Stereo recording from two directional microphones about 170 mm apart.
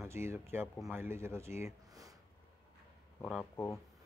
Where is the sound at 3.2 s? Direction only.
5° left (ahead or behind).